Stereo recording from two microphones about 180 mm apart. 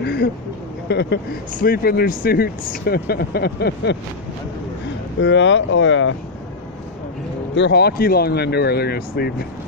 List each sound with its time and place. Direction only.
0.0 s speech: 65° left (ahead or behind)
1.5 s speech: 50° left (ahead or behind); by 4.0 s 70° left (ahead or behind)
5.2 s speech: 90° left
7.5 s speech: 70° left (ahead or behind)